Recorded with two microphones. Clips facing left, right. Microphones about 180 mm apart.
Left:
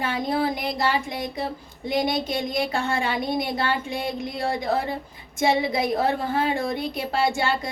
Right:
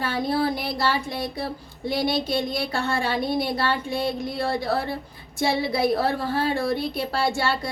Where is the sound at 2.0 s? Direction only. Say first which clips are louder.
Even; 15° left (ahead or behind).